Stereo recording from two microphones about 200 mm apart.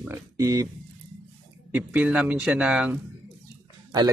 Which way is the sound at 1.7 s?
5° right (ahead or behind).